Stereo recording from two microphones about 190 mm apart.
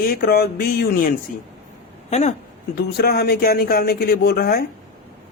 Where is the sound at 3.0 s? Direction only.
55° left (ahead or behind).